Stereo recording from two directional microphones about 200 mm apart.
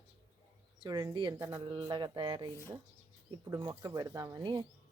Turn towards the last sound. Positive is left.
turn(degrees=-15)  # may be behind; listen again after turning